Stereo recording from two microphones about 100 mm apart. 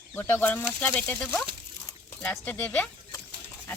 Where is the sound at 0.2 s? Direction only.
20° left (ahead or behind).